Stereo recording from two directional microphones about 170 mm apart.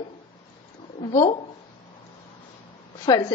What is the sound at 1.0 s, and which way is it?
Speech, 30° left (ahead or behind).